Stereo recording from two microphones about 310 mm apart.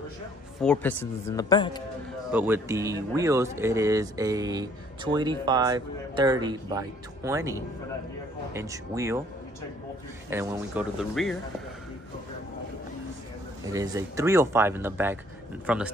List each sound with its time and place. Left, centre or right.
0.6 s speech: centre
2.3 s speech: centre
10.3 s speech: centre
13.7 s speech: centre